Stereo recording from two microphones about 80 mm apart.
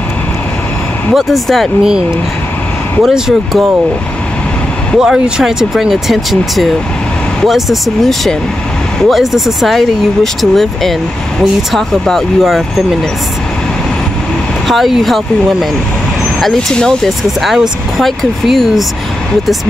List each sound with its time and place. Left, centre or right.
1.1 s speech: centre
1.8 s speech: centre
4.9 s speech: centre
14.7 s speech: centre
16.3 s speech: centre